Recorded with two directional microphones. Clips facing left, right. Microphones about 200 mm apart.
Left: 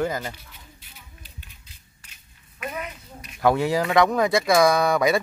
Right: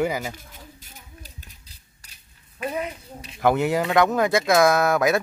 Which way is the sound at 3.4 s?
Centre (ahead or behind).